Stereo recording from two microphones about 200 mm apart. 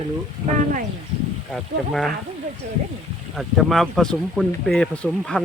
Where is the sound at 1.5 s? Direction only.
Centre (ahead or behind).